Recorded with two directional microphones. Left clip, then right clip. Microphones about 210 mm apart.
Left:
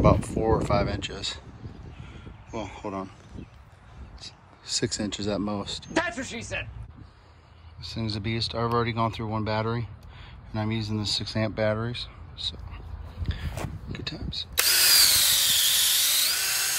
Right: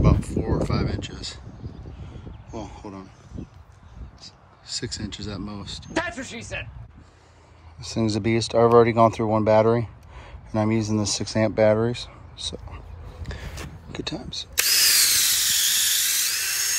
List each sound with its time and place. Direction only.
0.0 s speech: 5° right (ahead or behind)
2.5 s speech: 15° right (ahead or behind)
3.4 s speech: 55° right (ahead or behind)
4.2 s speech: 5° right (ahead or behind)
7.8 s speech: centre (ahead or behind)
14.6 s drill: 45° left (ahead or behind)